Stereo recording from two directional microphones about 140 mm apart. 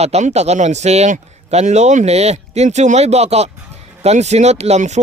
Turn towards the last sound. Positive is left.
turn(degrees=-55)  # may be behind; listen again after turning